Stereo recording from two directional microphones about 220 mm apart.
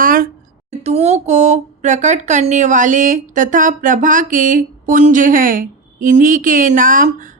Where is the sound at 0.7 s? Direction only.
30° right (ahead or behind).